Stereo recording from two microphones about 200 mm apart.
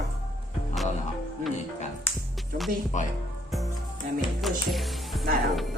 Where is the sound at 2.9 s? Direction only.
35° left (ahead or behind).